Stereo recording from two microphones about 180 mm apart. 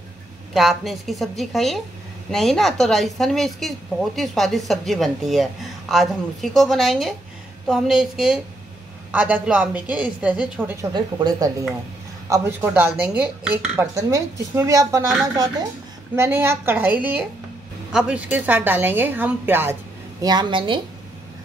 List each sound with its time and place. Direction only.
0.6 s a woman's voice: centre (ahead or behind)
10.8 s speech: 25° right (ahead or behind)